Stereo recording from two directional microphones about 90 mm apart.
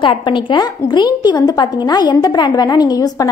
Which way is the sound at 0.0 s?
65° left (ahead or behind).